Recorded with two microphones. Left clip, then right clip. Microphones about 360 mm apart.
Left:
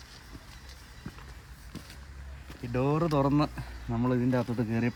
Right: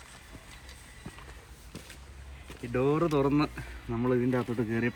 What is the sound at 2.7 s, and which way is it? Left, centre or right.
Speech, left.